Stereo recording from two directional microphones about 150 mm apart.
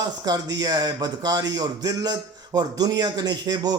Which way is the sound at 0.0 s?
25° right (ahead or behind).